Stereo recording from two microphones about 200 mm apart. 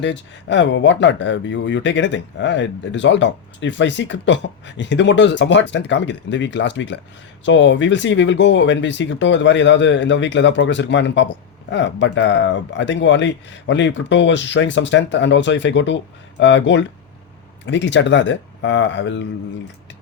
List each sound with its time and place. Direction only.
0.0 s speech: 60° left (ahead or behind)